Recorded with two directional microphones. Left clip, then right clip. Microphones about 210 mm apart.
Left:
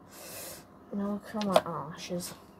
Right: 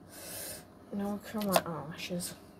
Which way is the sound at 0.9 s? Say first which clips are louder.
Left 2 dB; 15° right (ahead or behind).